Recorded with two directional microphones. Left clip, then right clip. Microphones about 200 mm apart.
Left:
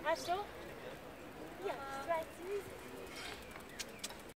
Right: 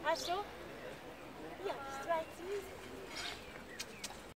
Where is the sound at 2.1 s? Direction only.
10° right (ahead or behind).